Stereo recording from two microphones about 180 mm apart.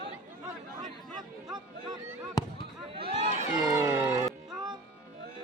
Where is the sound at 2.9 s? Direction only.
35° right (ahead or behind).